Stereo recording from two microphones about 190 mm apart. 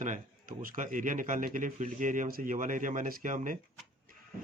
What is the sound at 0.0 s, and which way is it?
A man's voice, 45° right (ahead or behind).